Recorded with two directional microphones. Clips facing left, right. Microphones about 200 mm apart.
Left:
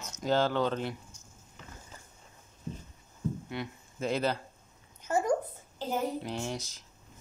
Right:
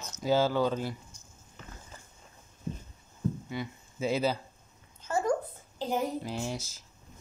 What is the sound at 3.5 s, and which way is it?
Speech, 5° right (ahead or behind).